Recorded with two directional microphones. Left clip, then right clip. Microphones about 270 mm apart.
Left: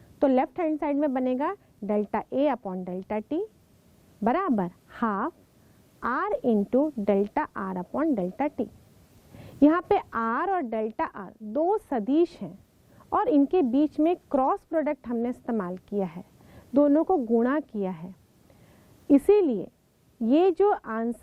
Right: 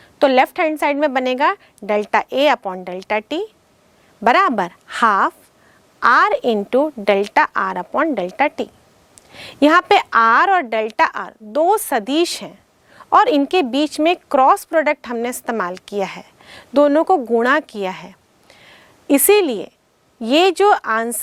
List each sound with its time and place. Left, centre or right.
0.2 s a woman's voice: centre
17.1 s speech: centre
17.4 s a woman's voice: centre
18.6 s a sound: centre
20.2 s a woman's voice: centre